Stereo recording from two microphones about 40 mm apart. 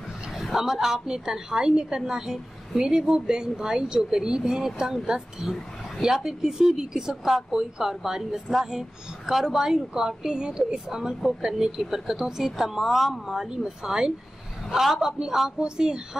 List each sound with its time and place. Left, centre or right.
0.4 s a woman's voice: centre